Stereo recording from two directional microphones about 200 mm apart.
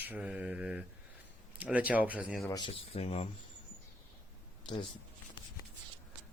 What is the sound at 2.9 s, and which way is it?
Speech, 30° left (ahead or behind).